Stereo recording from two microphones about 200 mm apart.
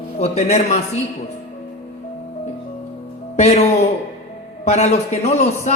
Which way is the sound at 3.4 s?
35° left (ahead or behind).